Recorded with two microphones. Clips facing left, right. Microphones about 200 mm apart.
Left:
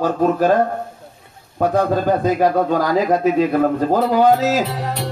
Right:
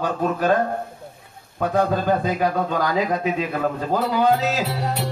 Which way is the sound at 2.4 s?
45° left (ahead or behind).